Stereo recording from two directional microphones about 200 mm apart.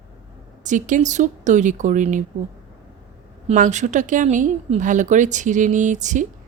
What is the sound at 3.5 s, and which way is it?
Speech, 35° right (ahead or behind).